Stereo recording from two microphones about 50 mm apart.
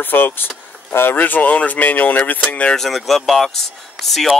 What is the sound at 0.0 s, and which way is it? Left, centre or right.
Speech, left.